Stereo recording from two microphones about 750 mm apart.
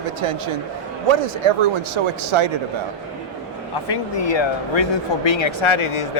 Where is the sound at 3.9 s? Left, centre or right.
Left.